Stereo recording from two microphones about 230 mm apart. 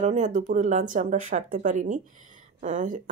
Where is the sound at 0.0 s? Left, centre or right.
Right.